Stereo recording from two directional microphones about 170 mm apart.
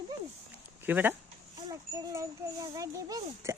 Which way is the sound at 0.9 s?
10° right (ahead or behind).